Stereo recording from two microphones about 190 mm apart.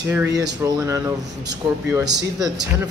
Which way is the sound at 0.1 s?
10° right (ahead or behind).